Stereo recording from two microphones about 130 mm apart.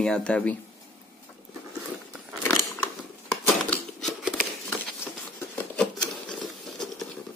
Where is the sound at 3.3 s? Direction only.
5° left (ahead or behind).